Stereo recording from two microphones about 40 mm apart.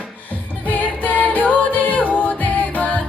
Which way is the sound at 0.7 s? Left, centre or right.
Left.